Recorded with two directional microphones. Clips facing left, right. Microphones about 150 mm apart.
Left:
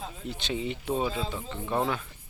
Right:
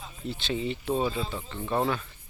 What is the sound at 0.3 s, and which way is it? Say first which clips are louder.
Speech: right 2 dB; 15° left (ahead or behind).